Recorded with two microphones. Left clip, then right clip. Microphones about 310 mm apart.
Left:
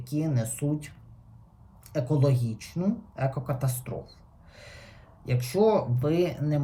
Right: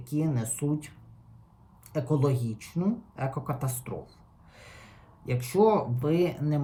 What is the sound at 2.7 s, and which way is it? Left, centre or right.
Speech, centre.